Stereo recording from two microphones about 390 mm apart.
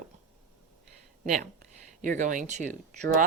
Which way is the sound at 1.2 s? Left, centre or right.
Centre.